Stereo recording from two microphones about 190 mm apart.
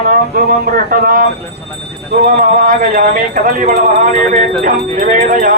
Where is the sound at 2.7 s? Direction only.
45° right (ahead or behind).